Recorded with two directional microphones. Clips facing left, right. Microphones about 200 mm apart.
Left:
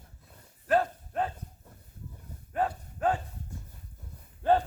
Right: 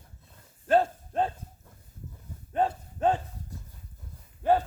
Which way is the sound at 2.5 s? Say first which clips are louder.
Right 3 dB; 25° right (ahead or behind).